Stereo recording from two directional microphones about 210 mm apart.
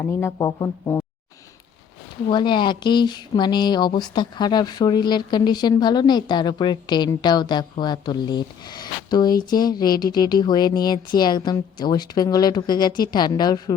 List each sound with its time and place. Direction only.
0.0 s speech: 10° left (ahead or behind)
2.2 s speech: 20° left (ahead or behind)